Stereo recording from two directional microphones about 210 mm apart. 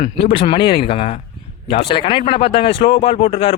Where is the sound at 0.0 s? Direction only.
25° left (ahead or behind).